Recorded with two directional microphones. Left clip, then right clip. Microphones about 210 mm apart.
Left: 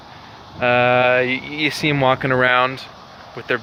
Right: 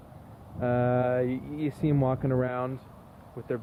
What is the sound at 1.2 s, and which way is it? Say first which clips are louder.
Speech: left 11 dB; 10° right (ahead or behind).